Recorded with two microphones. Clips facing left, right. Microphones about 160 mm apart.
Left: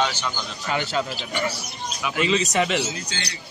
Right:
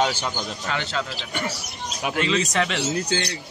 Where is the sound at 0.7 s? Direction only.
10° left (ahead or behind).